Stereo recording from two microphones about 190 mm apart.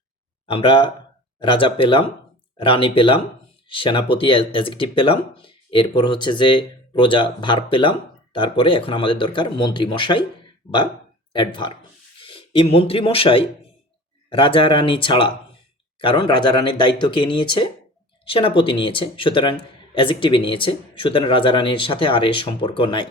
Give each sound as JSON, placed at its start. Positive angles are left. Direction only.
{"t": 0.4, "sound": "speech", "side_deg": 25}
{"t": 11.3, "sound": "speech", "side_deg": 25}